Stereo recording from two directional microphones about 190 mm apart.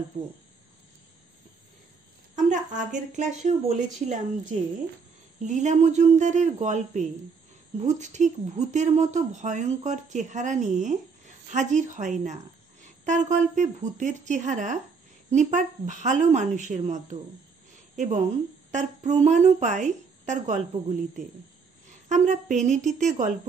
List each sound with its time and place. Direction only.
2.3 s a woman's voice: 40° right (ahead or behind)
22.1 s a woman's voice: 40° right (ahead or behind)